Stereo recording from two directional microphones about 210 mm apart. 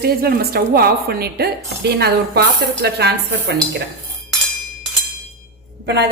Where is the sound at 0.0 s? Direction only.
45° right (ahead or behind).